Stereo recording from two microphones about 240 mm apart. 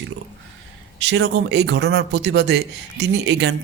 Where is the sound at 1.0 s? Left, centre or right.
Right.